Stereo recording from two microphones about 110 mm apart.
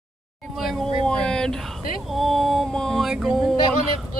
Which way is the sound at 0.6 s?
Centre (ahead or behind).